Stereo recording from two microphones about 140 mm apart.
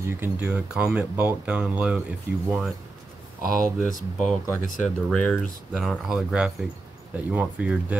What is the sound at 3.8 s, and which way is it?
Speech, 70° left (ahead or behind).